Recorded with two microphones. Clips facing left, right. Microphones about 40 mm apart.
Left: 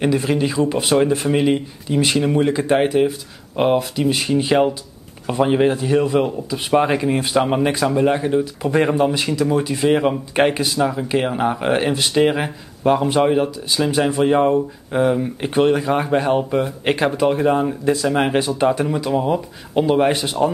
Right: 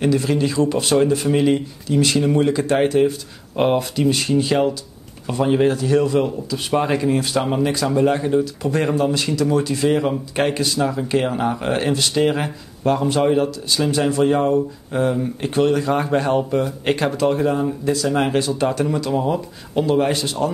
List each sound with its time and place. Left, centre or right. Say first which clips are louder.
0.0 s speech: even; left; by 4.1 s centre
4.1 s speech: left 2 dB; centre
7.9 s speech: even; centre